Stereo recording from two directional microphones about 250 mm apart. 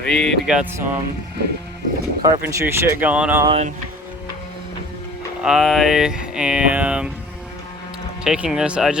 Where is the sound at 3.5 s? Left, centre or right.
Right.